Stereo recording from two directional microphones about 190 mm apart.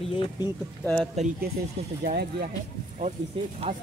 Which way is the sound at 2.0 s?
55° right (ahead or behind).